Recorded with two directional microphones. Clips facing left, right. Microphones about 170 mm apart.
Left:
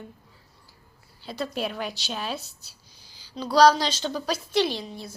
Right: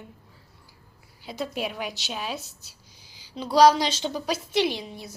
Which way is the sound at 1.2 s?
15° right (ahead or behind).